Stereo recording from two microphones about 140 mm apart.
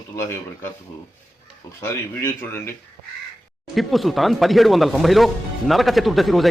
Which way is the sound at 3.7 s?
Centre (ahead or behind).